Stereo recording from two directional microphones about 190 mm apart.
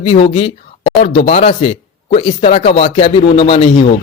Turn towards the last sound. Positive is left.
turn(degrees=30)  # may be behind; listen again after turning